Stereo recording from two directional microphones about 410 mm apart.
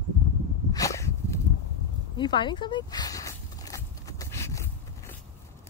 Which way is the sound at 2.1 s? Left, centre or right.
Centre.